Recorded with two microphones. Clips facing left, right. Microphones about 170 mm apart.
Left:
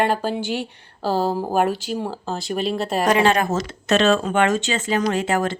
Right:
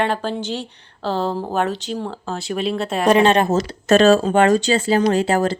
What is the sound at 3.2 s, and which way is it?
Speech, 30° right (ahead or behind).